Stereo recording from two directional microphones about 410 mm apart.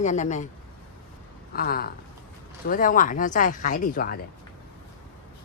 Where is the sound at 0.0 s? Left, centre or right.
Centre.